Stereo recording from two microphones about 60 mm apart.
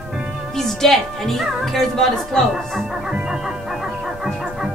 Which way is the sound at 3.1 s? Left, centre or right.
Centre.